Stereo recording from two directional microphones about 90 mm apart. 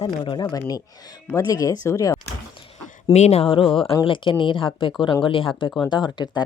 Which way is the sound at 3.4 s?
85° left.